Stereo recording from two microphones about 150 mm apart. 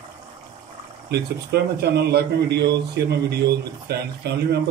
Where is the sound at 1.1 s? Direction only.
90° right.